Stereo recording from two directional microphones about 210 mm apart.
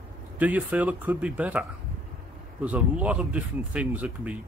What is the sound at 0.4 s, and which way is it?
Speech, 5° right (ahead or behind).